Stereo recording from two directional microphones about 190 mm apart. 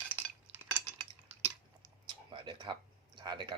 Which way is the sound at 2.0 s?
25° right (ahead or behind).